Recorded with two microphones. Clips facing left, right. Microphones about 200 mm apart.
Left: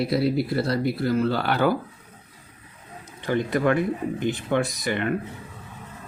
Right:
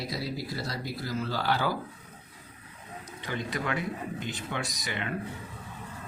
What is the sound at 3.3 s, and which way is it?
Speech, 55° left (ahead or behind).